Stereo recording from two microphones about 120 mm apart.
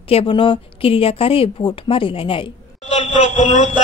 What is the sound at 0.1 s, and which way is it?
A woman's voice, 50° left (ahead or behind).